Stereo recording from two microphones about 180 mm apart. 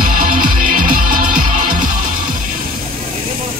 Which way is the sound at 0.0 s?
50° right (ahead or behind).